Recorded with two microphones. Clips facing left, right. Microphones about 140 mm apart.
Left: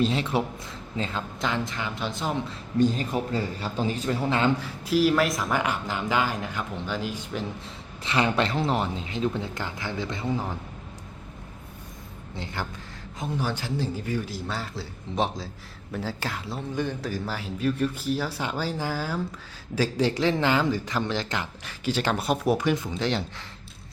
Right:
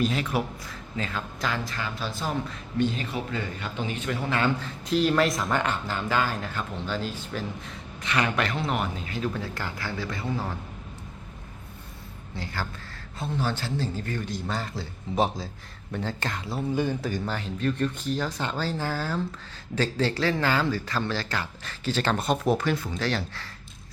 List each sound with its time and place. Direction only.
0.0 s speech: 25° left (ahead or behind)
2.7 s a man's voice: 40° left (ahead or behind); by 4.5 s 25° left (ahead or behind)
4.6 s a man's voice: 5° left (ahead or behind)
7.6 s speech: 30° left (ahead or behind)
13.1 s a man's voice: 15° left (ahead or behind)